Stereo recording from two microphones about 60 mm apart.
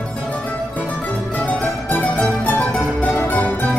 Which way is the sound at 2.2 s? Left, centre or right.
Left.